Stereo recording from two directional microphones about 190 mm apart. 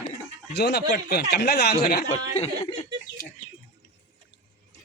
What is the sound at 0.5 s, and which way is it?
Speech, 60° left (ahead or behind).